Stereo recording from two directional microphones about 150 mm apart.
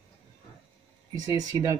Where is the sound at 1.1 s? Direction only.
25° right (ahead or behind).